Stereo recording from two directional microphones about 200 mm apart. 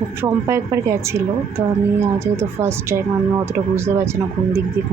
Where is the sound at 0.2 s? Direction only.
15° right (ahead or behind).